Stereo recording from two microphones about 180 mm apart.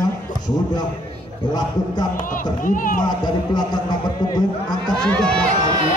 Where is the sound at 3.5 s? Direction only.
20° left (ahead or behind).